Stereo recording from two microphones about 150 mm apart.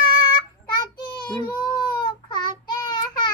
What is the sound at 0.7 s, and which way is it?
Child singing, 30° left (ahead or behind).